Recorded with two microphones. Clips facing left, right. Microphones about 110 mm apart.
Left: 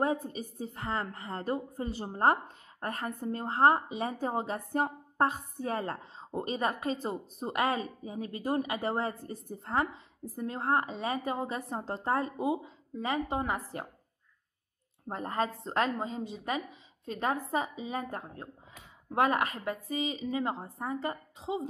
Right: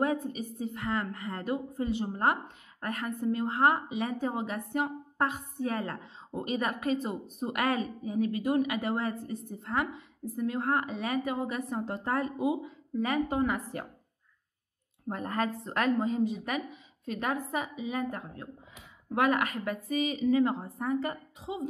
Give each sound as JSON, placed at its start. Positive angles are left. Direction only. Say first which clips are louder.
{"t": 0.0, "sound": "a woman's voice", "louder": "right 1 dB", "side_deg": 30}
{"t": 15.0, "sound": "a woman's voice", "louder": "right 1 dB", "side_deg": 25}